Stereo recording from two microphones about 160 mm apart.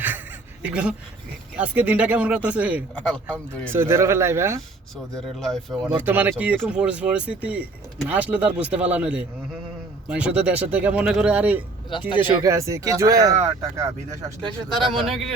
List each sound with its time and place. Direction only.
0.6 s speech: 5° right (ahead or behind)
3.1 s speech: 5° left (ahead or behind)
3.7 s speech: 15° right (ahead or behind)
5.4 s speech: centre (ahead or behind)
6.0 s speech: 10° right (ahead or behind)
11.9 s speech: 30° left (ahead or behind)
12.4 s speech: 20° right (ahead or behind)
14.8 s speech: centre (ahead or behind)